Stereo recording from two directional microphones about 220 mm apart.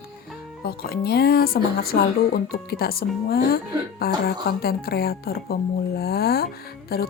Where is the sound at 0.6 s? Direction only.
45° left (ahead or behind).